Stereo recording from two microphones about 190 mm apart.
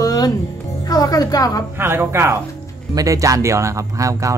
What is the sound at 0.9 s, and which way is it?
Speech, 20° left (ahead or behind).